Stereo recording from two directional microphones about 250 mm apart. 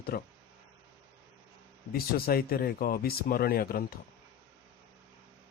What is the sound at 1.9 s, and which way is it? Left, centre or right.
Speech, left.